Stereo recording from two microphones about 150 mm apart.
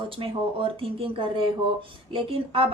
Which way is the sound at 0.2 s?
40° right (ahead or behind).